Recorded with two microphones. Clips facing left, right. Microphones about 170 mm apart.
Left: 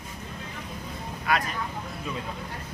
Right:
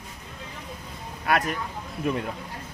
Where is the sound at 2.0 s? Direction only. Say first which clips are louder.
Right 9 dB; 60° right (ahead or behind).